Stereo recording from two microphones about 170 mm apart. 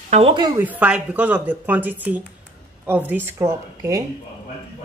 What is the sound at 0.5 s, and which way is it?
A woman's voice, 10° right (ahead or behind).